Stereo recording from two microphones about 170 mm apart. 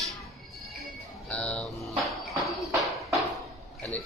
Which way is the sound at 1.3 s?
5° left (ahead or behind).